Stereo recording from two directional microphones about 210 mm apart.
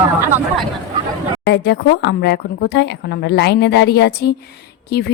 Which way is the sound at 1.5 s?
55° left (ahead or behind).